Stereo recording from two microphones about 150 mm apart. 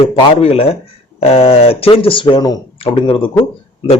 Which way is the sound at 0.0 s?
40° left (ahead or behind).